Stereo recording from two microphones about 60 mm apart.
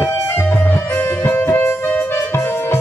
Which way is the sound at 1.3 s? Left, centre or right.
Left.